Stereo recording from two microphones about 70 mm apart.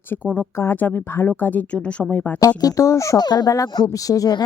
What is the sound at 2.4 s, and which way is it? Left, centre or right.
Speech, left.